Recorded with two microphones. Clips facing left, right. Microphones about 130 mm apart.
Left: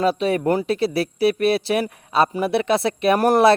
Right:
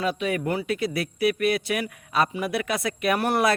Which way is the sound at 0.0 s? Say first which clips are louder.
Left 6 dB; 35° left (ahead or behind).